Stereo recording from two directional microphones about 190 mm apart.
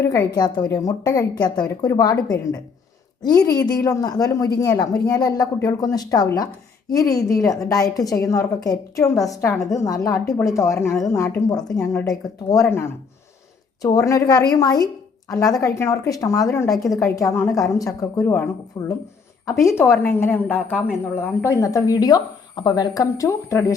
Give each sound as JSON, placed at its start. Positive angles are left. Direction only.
{"t": 0.0, "sound": "a woman's voice", "side_deg": 15}